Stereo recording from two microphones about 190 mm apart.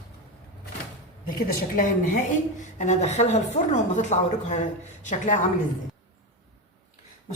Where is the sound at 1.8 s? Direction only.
40° left (ahead or behind).